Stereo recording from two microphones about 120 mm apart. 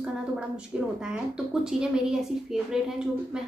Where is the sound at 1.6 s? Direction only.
5° right (ahead or behind).